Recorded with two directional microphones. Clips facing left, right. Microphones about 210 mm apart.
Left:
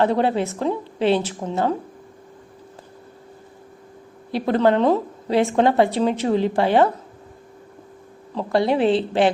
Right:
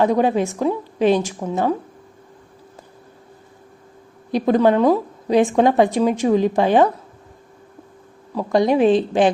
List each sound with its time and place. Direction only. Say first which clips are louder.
0.0 s a woman's voice: right 2 dB; 15° right (ahead or behind)
4.3 s a woman's voice: right 3 dB; 15° right (ahead or behind)
8.4 s a woman's voice: right 3 dB; 15° right (ahead or behind)